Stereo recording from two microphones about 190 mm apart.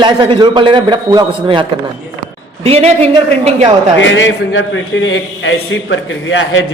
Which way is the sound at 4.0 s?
75° left (ahead or behind).